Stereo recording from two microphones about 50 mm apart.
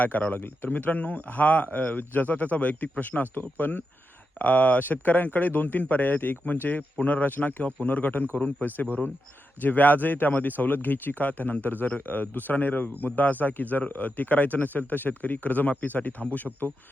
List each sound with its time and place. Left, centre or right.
0.0 s speech: left
0.3 s speech: left